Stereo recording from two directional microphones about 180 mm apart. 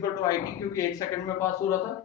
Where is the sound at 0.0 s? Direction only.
20° left (ahead or behind).